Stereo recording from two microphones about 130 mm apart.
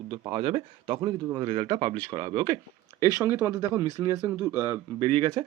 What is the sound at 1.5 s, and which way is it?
Speech, 40° right (ahead or behind).